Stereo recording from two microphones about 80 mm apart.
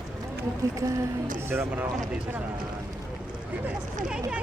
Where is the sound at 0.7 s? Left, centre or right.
Right.